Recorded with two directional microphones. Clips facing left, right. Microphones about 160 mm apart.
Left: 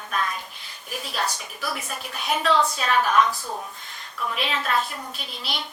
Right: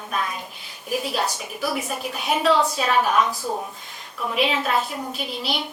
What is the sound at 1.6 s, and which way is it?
A woman's voice, 5° right (ahead or behind).